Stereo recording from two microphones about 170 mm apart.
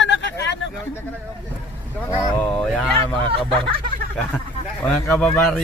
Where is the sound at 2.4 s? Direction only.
10° left (ahead or behind).